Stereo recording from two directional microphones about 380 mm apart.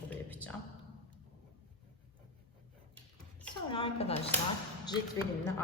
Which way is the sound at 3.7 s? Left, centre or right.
Centre.